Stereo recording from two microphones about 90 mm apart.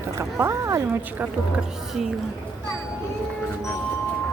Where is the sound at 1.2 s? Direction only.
10° right (ahead or behind).